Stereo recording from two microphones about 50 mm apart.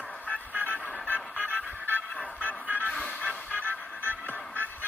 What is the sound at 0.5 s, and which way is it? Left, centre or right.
Music, right.